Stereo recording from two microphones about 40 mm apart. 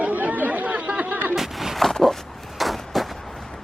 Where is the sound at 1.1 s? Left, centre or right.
Right.